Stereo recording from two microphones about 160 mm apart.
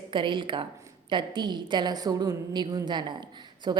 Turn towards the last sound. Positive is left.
turn(degrees=-25)  # may be behind; listen again after turning